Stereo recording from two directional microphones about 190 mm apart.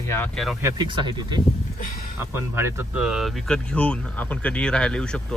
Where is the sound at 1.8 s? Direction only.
50° left (ahead or behind).